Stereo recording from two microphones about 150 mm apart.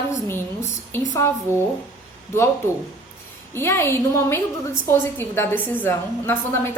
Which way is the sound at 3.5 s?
15° left (ahead or behind).